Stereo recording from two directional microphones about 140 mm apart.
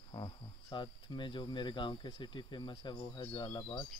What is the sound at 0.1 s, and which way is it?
Speech, 35° left (ahead or behind).